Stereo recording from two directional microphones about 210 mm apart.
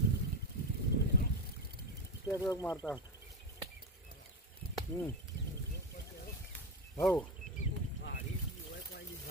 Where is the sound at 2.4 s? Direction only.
15° left (ahead or behind).